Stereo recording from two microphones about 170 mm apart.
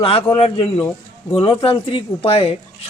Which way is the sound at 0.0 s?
30° left (ahead or behind).